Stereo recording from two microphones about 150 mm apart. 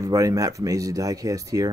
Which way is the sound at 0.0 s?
20° right (ahead or behind).